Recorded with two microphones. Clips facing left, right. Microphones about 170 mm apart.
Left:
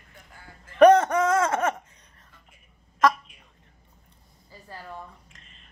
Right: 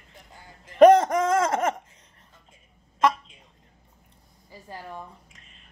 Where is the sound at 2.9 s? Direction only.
25° right (ahead or behind).